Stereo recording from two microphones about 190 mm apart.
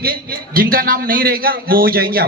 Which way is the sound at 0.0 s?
50° right (ahead or behind).